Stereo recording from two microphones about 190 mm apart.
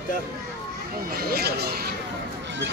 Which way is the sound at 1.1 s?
55° right (ahead or behind).